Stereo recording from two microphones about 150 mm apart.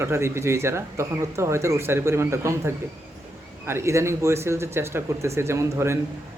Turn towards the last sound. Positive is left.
turn(degrees=-20)  # may be behind; listen again after turning